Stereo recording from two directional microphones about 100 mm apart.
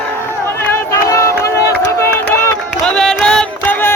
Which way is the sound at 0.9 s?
30° left (ahead or behind).